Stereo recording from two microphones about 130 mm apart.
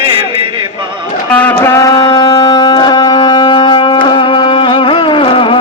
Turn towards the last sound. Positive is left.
turn(degrees=40)  # may be behind; listen again after turning